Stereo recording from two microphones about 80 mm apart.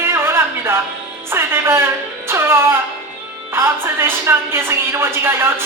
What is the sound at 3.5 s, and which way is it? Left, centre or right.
A woman's voice, right.